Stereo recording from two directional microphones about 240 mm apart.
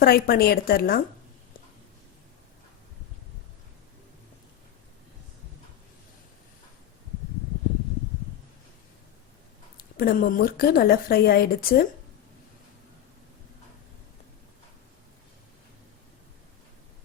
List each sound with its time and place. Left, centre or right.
0.0 s a woman's voice: left
10.0 s a woman's voice: left